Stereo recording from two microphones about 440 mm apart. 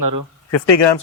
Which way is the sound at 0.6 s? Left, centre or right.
Left.